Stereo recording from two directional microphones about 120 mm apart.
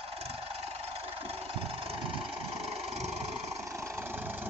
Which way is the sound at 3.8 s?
20° right (ahead or behind).